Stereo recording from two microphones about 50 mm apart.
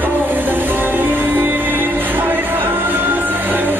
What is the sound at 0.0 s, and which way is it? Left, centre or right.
Music, right.